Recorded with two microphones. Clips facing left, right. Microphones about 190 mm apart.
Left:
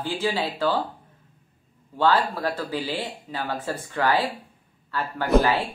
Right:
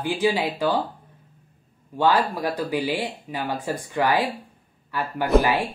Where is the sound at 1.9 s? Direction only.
15° right (ahead or behind).